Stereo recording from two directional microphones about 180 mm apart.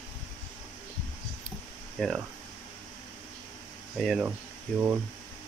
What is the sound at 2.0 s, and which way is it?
Speech, 5° left (ahead or behind).